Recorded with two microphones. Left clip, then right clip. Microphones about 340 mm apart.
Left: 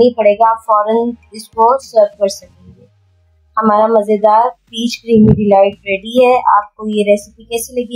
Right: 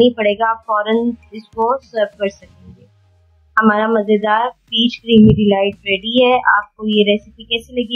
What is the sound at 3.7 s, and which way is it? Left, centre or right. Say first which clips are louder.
Speech: left 9 dB; centre.